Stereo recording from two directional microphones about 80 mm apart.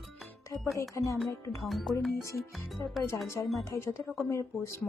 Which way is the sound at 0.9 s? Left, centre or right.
Left.